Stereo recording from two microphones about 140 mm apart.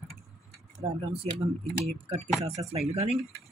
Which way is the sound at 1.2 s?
45° right (ahead or behind).